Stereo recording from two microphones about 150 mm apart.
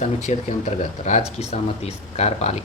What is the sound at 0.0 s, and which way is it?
Speech, 50° left (ahead or behind).